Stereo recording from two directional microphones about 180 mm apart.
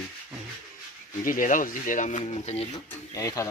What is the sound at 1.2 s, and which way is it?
Speech, 50° left (ahead or behind).